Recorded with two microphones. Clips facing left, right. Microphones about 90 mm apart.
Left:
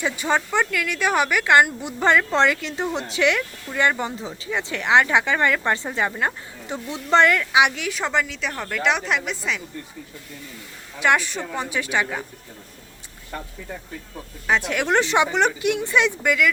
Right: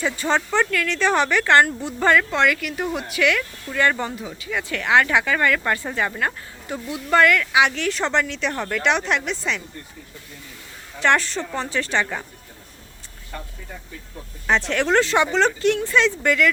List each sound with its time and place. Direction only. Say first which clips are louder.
0.0 s speech: right 1 dB; 15° left (ahead or behind)
7.8 s a woman's voice: right 2 dB; 5° left (ahead or behind)
11.0 s speech: right 1 dB; 10° left (ahead or behind)
14.4 s speech: right 1 dB; 5° left (ahead or behind)